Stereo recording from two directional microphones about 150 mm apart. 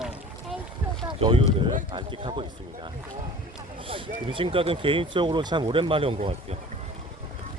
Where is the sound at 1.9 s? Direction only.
30° right (ahead or behind).